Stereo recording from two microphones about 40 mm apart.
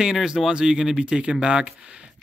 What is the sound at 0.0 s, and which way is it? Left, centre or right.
Speech, centre.